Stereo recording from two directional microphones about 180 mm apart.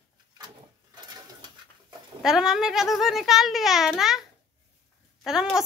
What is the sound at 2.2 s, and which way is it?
A child's voice, centre (ahead or behind).